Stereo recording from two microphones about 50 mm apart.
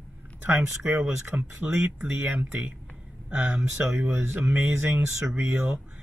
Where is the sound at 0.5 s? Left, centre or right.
Right.